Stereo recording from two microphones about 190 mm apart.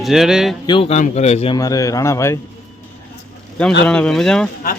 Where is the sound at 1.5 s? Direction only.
20° left (ahead or behind).